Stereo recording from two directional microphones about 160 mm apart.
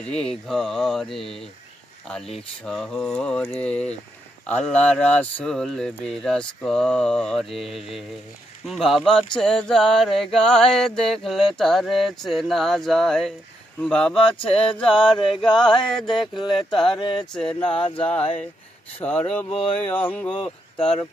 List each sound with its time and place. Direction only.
0.0 s a sound: 5° left (ahead or behind)
2.6 s a sound: 5° left (ahead or behind)
17.0 s speech: 30° left (ahead or behind)
17.3 s speech: 5° left (ahead or behind)
19.5 s speech: 35° left (ahead or behind)
19.9 s speech: 10° left (ahead or behind)